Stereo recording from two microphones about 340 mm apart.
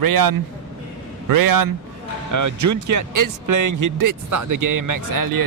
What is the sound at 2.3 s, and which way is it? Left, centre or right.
Speech, right.